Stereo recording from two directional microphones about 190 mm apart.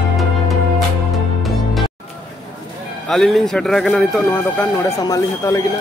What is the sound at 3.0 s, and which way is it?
A man's voice, centre (ahead or behind).